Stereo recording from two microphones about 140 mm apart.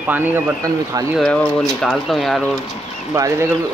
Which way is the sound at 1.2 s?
5° left (ahead or behind).